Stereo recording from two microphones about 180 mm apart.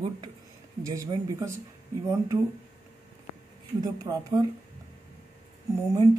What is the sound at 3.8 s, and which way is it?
Speech, 20° right (ahead or behind).